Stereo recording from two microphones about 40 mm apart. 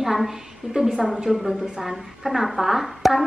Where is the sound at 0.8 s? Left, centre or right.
Right.